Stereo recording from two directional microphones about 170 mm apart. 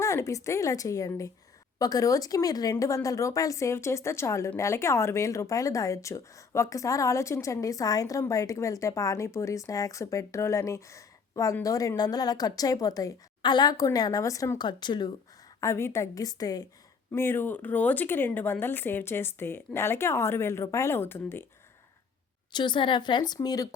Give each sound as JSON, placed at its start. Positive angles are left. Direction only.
{"t": 0.0, "sound": "speech", "side_deg": 15}
{"t": 22.5, "sound": "speech", "side_deg": 25}